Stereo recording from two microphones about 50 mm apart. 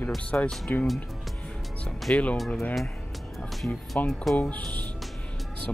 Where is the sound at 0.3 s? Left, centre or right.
Left.